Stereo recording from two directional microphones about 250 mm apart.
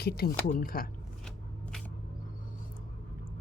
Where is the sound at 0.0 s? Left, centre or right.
Left.